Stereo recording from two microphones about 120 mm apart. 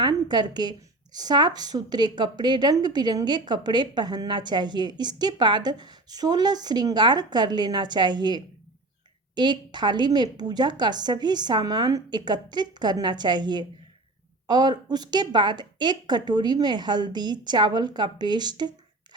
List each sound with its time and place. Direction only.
0.0 s a woman's voice: 40° right (ahead or behind)